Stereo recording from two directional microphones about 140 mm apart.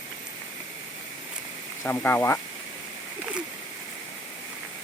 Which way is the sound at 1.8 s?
15° left (ahead or behind).